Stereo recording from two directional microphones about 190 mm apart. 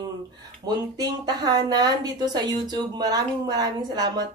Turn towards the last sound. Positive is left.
turn(degrees=-20)  # may be behind; listen again after turning